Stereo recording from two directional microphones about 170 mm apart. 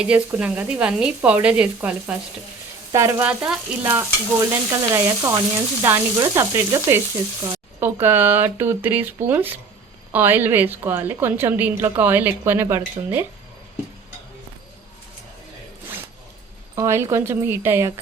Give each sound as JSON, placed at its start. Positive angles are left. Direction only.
{"t": 0.0, "sound": "a woman's voice", "side_deg": -5}
{"t": 3.2, "sound": "a woman's voice", "side_deg": -5}
{"t": 16.7, "sound": "a woman's voice", "side_deg": -15}